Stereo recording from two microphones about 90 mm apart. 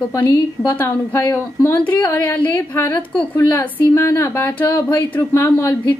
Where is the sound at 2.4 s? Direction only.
20° left (ahead or behind).